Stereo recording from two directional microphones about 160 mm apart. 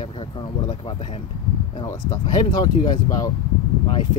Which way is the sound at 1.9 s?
25° left (ahead or behind).